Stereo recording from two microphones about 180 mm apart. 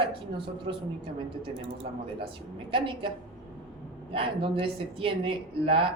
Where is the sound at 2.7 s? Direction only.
30° right (ahead or behind).